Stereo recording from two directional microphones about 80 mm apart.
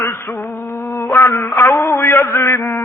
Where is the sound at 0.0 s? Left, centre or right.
Left.